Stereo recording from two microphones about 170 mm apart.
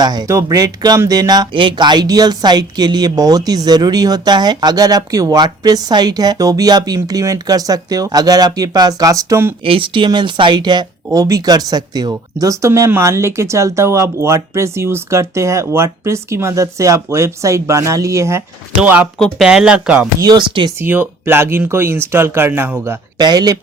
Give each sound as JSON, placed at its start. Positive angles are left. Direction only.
{"t": 0.0, "sound": "speech", "side_deg": -25}
{"t": 9.6, "sound": "speech", "side_deg": -30}
{"t": 20.1, "sound": "speech", "side_deg": -25}
{"t": 20.7, "sound": "speech", "side_deg": -10}